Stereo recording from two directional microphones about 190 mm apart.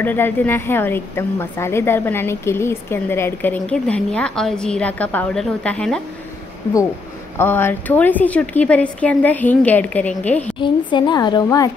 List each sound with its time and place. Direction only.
0.0 s a woman's voice: 10° left (ahead or behind)
7.3 s a woman's voice: 10° left (ahead or behind)
10.6 s speech: 25° left (ahead or behind)